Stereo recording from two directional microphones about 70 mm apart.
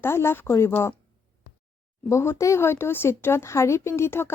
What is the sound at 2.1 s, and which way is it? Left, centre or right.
Speech, left.